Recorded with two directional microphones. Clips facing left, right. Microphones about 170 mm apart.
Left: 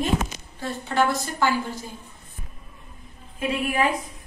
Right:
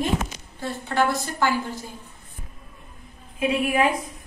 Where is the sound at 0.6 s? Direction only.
15° right (ahead or behind).